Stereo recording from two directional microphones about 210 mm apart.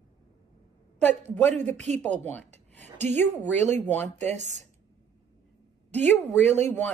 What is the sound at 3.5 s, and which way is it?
Speech, 35° right (ahead or behind).